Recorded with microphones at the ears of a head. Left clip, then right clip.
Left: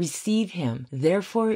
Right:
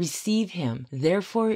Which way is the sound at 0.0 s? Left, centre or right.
Centre.